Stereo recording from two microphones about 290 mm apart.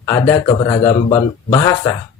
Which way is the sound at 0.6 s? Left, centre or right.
Centre.